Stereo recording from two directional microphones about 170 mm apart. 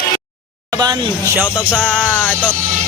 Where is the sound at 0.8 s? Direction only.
20° right (ahead or behind).